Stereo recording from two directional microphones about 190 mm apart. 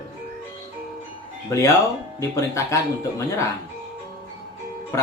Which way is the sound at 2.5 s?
15° left (ahead or behind).